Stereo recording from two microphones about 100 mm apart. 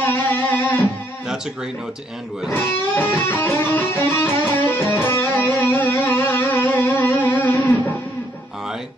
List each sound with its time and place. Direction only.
0.0 s music: 20° left (ahead or behind)
1.2 s speech: 5° right (ahead or behind)
2.5 s music: 20° left (ahead or behind)